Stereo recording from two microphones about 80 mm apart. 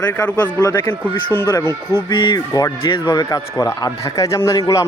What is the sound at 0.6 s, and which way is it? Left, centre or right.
Speech, left.